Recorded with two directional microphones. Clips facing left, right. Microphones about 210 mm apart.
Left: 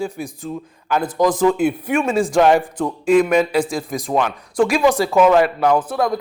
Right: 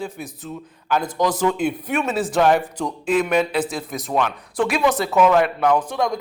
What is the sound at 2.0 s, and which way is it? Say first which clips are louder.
Speech: left 5 dB; 5° right (ahead or behind).